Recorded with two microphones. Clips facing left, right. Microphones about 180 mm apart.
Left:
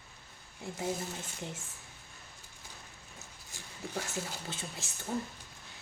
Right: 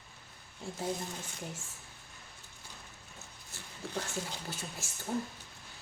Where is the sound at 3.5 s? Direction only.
10° left (ahead or behind).